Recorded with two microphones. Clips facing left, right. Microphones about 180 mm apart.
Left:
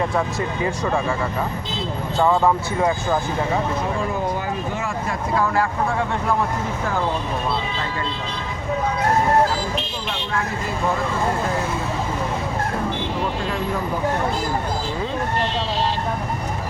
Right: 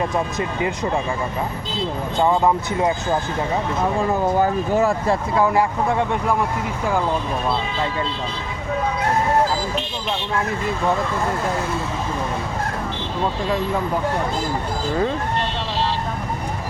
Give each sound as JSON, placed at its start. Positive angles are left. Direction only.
{"t": 2.2, "sound": "speech", "side_deg": -20}
{"t": 4.3, "sound": "speech", "side_deg": -45}